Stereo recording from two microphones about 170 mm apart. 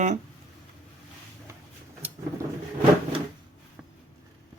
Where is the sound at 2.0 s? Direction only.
10° right (ahead or behind).